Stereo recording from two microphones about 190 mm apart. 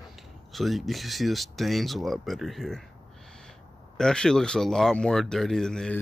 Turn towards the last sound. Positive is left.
turn(degrees=5)  # may be behind; listen again after turning